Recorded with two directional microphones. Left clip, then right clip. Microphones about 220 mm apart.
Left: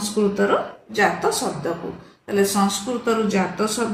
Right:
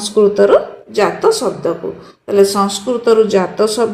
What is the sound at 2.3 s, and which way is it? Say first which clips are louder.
A woman's voice: right 8 dB; 25° right (ahead or behind).